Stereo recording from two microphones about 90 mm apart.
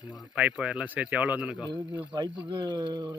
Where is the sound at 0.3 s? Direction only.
10° right (ahead or behind).